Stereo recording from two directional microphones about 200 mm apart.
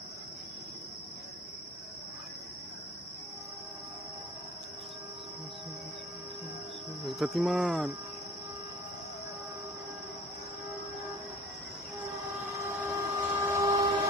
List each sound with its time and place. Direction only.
7.1 s cricket: centre (ahead or behind)
12.5 s vehicle: 15° right (ahead or behind)